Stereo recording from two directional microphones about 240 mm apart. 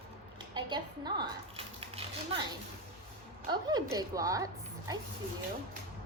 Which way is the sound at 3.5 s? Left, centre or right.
Centre.